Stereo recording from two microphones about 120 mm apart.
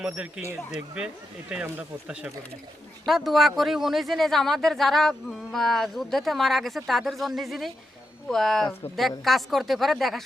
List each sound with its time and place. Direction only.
0.0 s speech: 10° right (ahead or behind)